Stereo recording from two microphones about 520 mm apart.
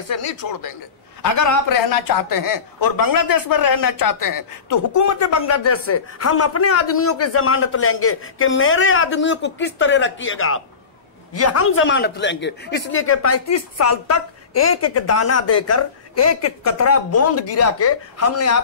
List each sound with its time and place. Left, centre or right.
0.1 s a man's voice: left